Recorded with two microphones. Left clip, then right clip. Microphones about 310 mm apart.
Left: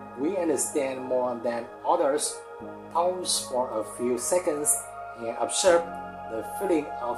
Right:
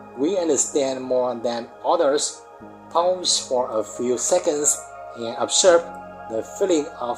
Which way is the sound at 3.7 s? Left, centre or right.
Right.